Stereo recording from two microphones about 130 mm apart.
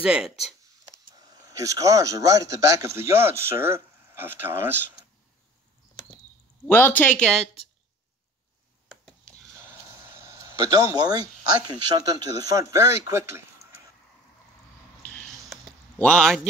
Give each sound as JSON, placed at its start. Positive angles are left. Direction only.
{"t": 0.0, "sound": "speech", "side_deg": -5}
{"t": 1.1, "sound": "speech", "side_deg": -30}
{"t": 6.7, "sound": "speech", "side_deg": 15}
{"t": 9.0, "sound": "a sound", "side_deg": 10}
{"t": 10.1, "sound": "speech", "side_deg": -20}
{"t": 15.0, "sound": "a sound", "side_deg": 10}